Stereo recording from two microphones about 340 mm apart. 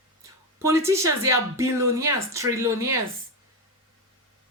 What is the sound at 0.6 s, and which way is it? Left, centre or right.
A man's voice, centre.